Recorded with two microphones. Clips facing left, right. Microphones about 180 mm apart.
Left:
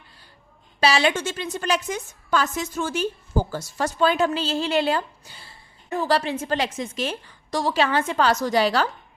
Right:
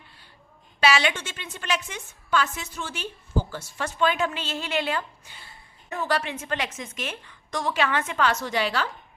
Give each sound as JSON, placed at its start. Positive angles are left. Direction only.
{"t": 0.8, "sound": "a woman's voice", "side_deg": 35}